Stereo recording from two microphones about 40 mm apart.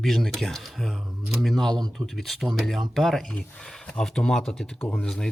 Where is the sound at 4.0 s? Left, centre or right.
Centre.